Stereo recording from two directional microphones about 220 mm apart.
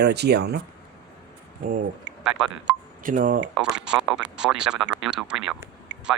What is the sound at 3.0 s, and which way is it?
Speech, 35° right (ahead or behind).